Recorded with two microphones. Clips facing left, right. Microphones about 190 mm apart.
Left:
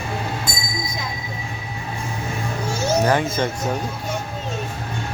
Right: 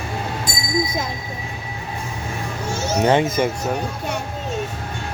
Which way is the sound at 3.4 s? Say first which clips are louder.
Right 3 dB; 10° right (ahead or behind).